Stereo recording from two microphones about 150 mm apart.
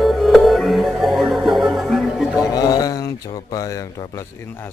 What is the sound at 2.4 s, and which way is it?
Speech, 25° left (ahead or behind).